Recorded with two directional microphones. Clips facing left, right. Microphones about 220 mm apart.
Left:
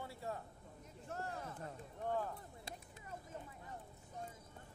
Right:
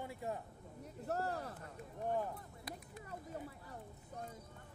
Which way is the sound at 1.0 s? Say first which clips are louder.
Right 6 dB; 40° right (ahead or behind).